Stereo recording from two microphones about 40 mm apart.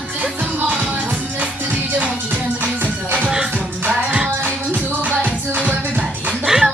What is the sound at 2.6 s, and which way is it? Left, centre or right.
Music, right.